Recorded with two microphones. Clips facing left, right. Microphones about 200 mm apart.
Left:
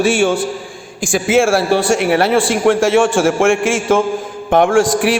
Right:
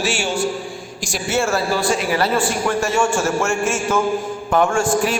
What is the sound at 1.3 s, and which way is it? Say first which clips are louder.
A man's voice: left 7 dB; 90° left.